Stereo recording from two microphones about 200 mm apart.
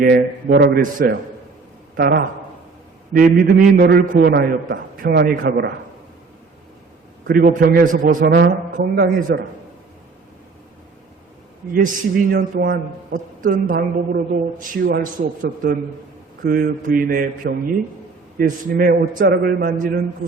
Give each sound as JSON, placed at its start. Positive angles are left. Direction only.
{"t": 0.0, "sound": "a man's voice", "side_deg": -50}
{"t": 7.3, "sound": "a man's voice", "side_deg": -50}
{"t": 11.7, "sound": "a man's voice", "side_deg": -45}